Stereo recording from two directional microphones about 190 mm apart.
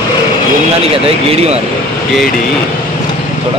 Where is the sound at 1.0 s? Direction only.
30° right (ahead or behind).